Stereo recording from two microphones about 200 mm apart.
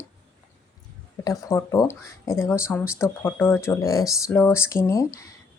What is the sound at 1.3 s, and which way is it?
Speech, 15° left (ahead or behind).